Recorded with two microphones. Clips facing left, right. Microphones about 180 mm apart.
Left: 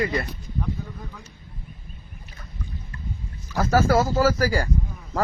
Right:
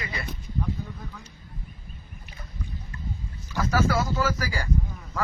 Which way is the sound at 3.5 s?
40° left (ahead or behind).